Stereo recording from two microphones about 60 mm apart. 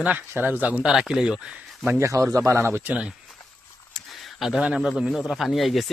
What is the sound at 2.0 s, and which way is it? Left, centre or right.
Speech, right.